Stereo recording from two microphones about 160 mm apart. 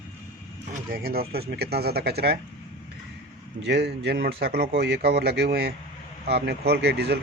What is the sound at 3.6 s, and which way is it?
Speech, 90° right.